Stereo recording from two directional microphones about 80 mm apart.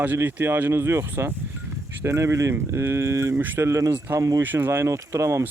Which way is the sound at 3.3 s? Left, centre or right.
Right.